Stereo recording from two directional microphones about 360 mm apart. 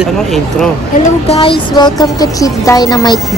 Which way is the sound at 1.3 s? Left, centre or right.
Centre.